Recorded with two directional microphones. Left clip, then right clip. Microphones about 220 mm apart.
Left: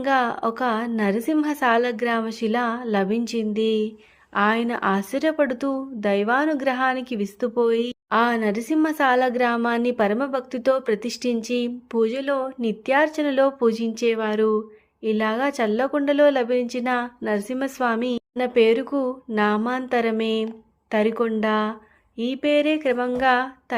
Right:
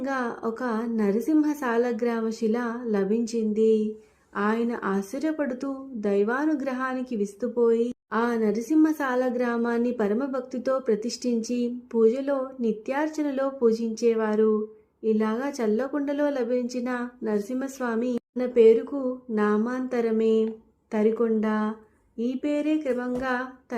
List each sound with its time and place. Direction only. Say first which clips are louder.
0.0 s speech: left 8 dB; 35° left (ahead or behind)